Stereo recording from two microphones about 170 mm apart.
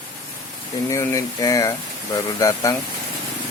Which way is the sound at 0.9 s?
20° left (ahead or behind).